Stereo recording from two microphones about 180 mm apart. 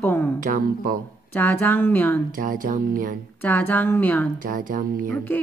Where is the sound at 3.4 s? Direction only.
10° left (ahead or behind).